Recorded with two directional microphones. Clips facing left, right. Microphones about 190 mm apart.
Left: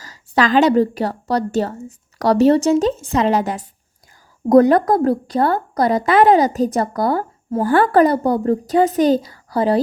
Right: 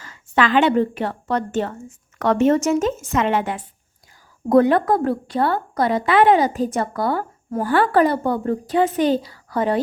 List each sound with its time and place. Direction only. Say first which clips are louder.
0.0 s a woman's voice: left 2 dB; 40° left (ahead or behind)